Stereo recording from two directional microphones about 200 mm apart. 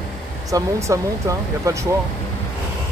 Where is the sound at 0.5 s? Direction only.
15° right (ahead or behind).